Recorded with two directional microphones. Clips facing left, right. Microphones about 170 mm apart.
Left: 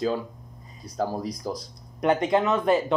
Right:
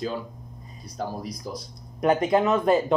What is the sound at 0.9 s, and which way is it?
Speech, 90° left.